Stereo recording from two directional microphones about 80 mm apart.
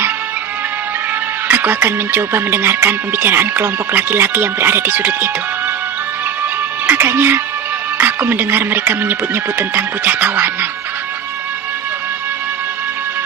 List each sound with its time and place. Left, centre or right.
1.5 s speech: right
6.9 s speech: right